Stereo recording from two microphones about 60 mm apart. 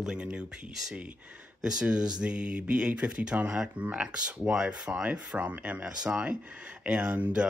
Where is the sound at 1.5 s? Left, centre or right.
Centre.